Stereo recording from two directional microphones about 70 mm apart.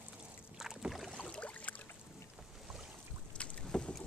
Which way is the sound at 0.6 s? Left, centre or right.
Centre.